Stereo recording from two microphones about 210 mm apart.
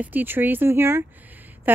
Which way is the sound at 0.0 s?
10° right (ahead or behind).